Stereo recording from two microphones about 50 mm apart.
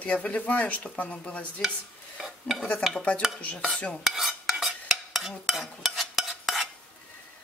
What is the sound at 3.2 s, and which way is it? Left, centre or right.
Dishes, centre.